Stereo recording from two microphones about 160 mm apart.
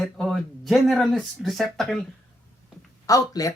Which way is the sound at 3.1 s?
20° left (ahead or behind).